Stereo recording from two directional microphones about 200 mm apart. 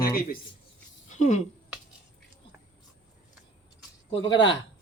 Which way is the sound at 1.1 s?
35° left (ahead or behind).